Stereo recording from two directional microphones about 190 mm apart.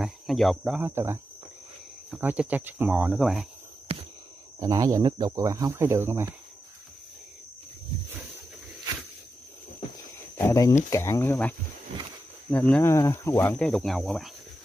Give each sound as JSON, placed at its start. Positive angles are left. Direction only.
{"t": 0.0, "sound": "speech", "side_deg": 0}
{"t": 4.6, "sound": "speech", "side_deg": -20}
{"t": 10.4, "sound": "speech", "side_deg": 15}